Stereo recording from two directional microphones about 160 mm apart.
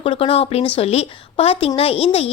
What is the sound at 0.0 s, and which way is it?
A woman's voice, 35° left (ahead or behind).